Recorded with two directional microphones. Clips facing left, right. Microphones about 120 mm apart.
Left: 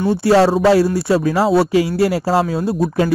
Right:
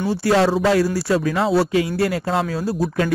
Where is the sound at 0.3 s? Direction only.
30° left (ahead or behind).